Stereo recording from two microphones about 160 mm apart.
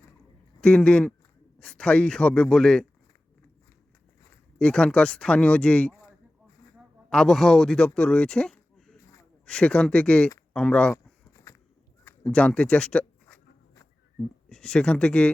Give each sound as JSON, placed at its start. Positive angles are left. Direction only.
{"t": 0.6, "sound": "speech", "side_deg": 5}
{"t": 4.6, "sound": "speech", "side_deg": 5}
{"t": 10.9, "sound": "a sound", "side_deg": 20}
{"t": 12.0, "sound": "speech", "side_deg": 5}